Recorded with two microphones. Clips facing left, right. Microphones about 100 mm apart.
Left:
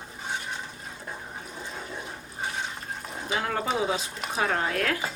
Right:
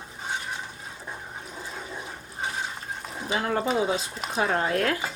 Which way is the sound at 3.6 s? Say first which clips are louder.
Right 2 dB; centre (ahead or behind).